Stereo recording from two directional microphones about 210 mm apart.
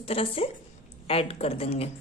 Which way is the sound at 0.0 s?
25° left (ahead or behind).